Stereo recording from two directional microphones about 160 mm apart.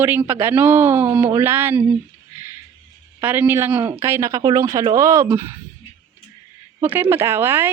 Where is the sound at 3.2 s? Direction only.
10° right (ahead or behind).